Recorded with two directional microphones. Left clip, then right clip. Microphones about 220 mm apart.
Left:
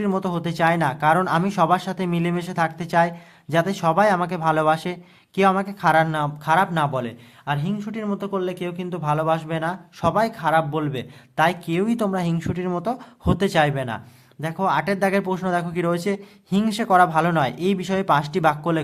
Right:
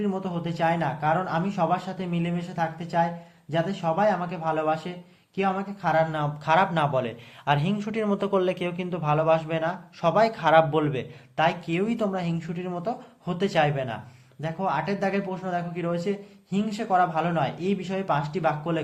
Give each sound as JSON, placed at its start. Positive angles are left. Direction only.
{"t": 0.0, "sound": "a man's voice", "side_deg": 35}